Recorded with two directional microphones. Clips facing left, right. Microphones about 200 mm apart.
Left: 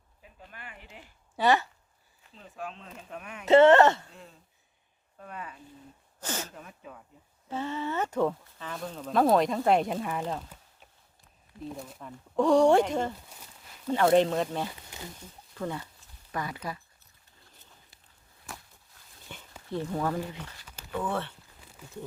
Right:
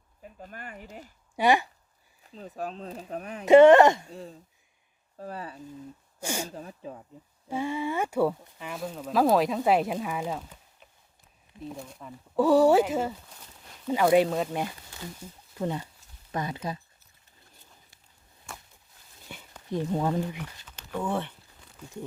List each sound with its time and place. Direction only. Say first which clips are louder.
0.2 s speech: right 6 dB; 45° right (ahead or behind)
1.4 s speech: right 2 dB; 15° right (ahead or behind)
2.2 s speech: right 5 dB; 40° right (ahead or behind)
3.4 s speech: right 3 dB; 15° right (ahead or behind)
4.1 s speech: right 9 dB; 35° right (ahead or behind)
6.1 s speech: right 3 dB; 10° right (ahead or behind)
6.5 s speech: right 6 dB; 30° right (ahead or behind)
7.4 s speech: right 3 dB; 10° right (ahead or behind)
11.7 s speech: even; centre (ahead or behind)
15.5 s speech: right 3 dB; 20° right (ahead or behind)
18.5 s a sound: even; centre (ahead or behind)
19.3 s dog: right 2 dB; 10° right (ahead or behind)
19.7 s speech: right 3 dB; 20° right (ahead or behind)